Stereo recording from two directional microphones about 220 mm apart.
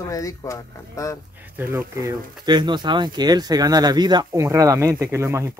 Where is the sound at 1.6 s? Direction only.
10° right (ahead or behind).